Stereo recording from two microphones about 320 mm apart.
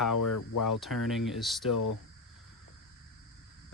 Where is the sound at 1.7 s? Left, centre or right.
Left.